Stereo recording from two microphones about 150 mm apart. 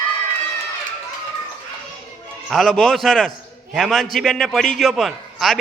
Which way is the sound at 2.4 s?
Centre (ahead or behind).